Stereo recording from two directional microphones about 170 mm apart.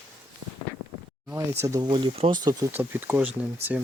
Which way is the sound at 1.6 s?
20° right (ahead or behind).